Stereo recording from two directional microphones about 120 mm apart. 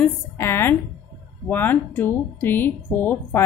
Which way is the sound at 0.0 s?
20° left (ahead or behind).